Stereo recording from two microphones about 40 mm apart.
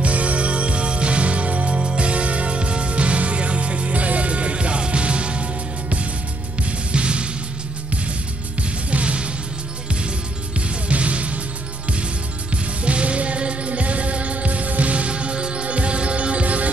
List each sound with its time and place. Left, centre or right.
0.0 s music: right
8.9 s music: right
10.9 s music: right
12.8 s music: right